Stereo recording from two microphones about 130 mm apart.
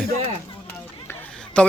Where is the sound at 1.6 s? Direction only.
5° left (ahead or behind).